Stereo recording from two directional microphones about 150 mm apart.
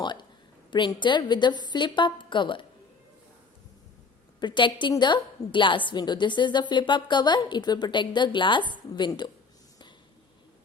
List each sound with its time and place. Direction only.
0.0 s a sound: 30° left (ahead or behind)
0.7 s a woman's voice: 30° left (ahead or behind)
4.4 s a woman's voice: 30° left (ahead or behind)